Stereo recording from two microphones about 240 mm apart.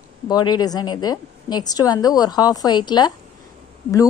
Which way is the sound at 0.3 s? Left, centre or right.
Centre.